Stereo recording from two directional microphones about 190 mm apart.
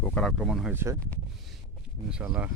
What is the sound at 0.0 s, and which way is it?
Speech, 5° left (ahead or behind).